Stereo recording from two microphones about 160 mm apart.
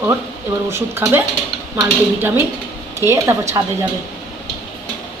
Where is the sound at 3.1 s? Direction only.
20° right (ahead or behind).